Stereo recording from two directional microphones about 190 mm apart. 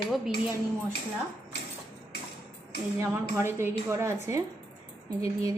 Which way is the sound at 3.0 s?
15° right (ahead or behind).